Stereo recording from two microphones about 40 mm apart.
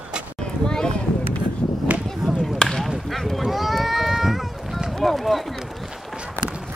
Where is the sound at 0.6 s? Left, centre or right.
Centre.